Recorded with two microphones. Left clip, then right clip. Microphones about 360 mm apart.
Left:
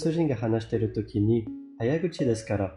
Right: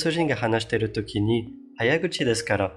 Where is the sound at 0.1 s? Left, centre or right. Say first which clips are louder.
Right 4 dB; right.